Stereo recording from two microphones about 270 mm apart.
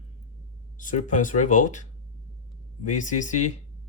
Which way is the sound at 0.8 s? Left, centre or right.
Left.